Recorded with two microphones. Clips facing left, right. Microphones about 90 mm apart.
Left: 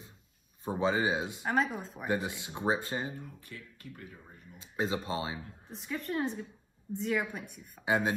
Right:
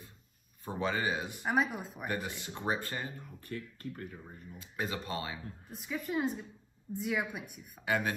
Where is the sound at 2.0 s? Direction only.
20° left (ahead or behind).